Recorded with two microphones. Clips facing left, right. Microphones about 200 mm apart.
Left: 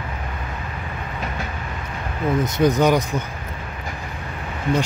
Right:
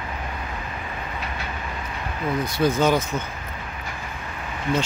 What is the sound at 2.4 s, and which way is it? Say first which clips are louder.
Speech: left 3 dB; 20° left (ahead or behind).